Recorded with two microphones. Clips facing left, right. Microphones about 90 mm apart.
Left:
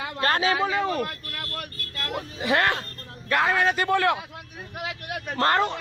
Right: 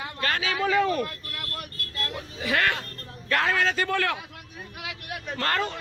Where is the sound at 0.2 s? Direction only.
35° left (ahead or behind).